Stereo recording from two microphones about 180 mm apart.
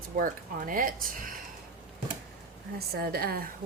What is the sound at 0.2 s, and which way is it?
Speech, 50° right (ahead or behind).